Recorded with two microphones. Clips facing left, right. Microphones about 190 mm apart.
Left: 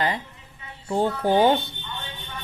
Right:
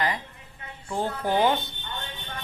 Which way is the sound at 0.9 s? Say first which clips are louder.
Left 5 dB; 30° left (ahead or behind).